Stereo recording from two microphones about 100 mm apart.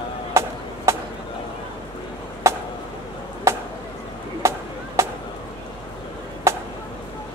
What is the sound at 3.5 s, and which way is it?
Chop, 25° right (ahead or behind).